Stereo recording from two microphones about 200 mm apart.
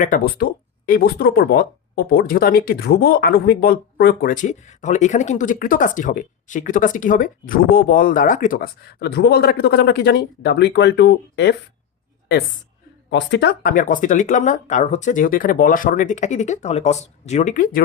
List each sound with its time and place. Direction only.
0.0 s speech: 45° left (ahead or behind); by 11.5 s 60° left (ahead or behind)
13.1 s speech: 60° left (ahead or behind); by 17.8 s 45° left (ahead or behind)